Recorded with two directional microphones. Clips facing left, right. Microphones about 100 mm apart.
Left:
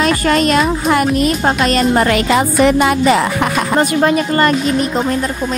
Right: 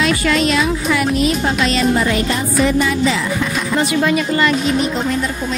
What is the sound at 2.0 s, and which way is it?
Music, 80° left.